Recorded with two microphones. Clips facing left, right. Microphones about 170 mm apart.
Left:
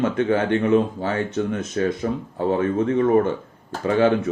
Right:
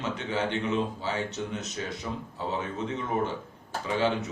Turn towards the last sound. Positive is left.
turn(degrees=55)  # may be behind; listen again after turning